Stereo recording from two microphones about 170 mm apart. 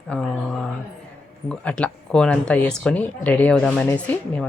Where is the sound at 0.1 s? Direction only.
5° left (ahead or behind).